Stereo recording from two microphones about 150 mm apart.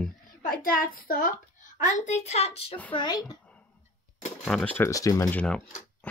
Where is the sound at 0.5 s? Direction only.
70° left (ahead or behind).